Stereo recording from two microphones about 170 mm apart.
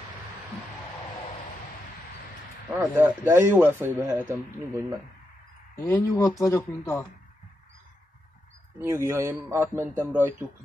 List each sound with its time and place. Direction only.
2.7 s a man's voice: 10° right (ahead or behind)
5.8 s speech: 20° left (ahead or behind)
8.7 s a man's voice: 15° right (ahead or behind)